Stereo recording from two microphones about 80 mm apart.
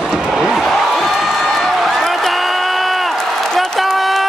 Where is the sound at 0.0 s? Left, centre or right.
Centre.